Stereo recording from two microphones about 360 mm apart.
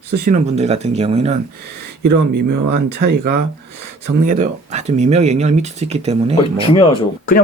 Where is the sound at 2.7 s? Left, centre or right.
Right.